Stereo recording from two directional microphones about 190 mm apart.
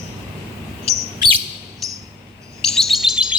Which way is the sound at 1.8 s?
Centre (ahead or behind).